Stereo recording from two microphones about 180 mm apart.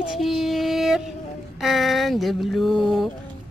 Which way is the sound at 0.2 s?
Centre (ahead or behind).